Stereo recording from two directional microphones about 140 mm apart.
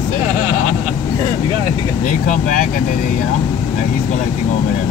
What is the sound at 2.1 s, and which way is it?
Speech, 70° left (ahead or behind).